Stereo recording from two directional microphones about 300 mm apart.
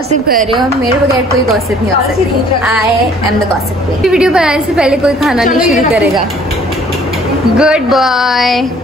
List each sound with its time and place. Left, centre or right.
0.3 s a woman's voice: right
4.0 s a woman's voice: centre
7.5 s a woman's voice: centre